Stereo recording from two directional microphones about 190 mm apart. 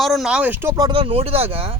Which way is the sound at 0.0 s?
Centre (ahead or behind).